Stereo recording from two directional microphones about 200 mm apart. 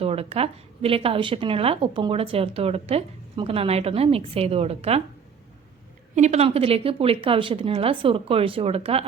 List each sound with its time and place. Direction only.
0.0 s a woman's voice: 30° right (ahead or behind)
6.1 s a woman's voice: 35° right (ahead or behind)